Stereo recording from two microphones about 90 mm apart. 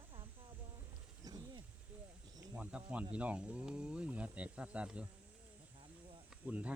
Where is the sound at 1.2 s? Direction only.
45° right (ahead or behind).